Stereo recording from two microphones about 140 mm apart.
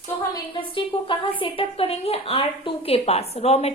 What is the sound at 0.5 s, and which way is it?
A woman's voice, 35° left (ahead or behind).